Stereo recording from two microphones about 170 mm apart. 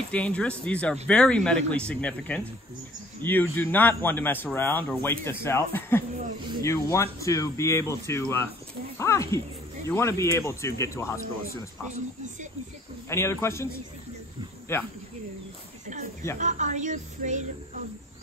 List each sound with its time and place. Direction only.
0.1 s a man's voice: 5° left (ahead or behind)
13.1 s a man's voice: 15° left (ahead or behind)
14.7 s a man's voice: 15° left (ahead or behind)
16.3 s a woman's voice: 45° right (ahead or behind)